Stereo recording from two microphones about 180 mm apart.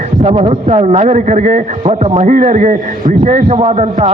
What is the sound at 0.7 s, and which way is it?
A man's voice, 35° right (ahead or behind).